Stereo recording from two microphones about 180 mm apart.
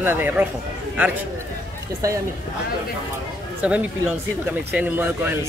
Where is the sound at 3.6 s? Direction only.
5° right (ahead or behind).